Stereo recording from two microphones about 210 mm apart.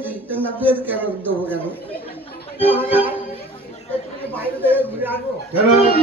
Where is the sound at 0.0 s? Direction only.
10° right (ahead or behind).